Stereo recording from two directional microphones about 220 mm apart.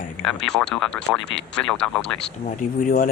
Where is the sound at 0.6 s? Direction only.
Centre (ahead or behind).